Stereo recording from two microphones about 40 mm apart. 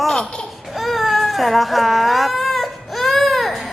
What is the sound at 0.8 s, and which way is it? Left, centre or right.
Baby cry, centre.